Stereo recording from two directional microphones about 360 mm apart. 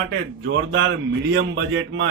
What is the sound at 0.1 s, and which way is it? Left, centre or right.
A man's voice, right.